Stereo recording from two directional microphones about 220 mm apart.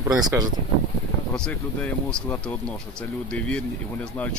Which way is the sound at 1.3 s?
5° left (ahead or behind).